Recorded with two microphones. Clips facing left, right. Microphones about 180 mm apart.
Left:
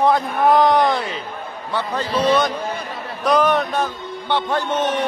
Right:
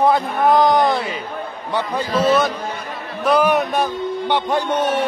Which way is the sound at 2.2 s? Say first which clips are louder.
Even; 5° right (ahead or behind).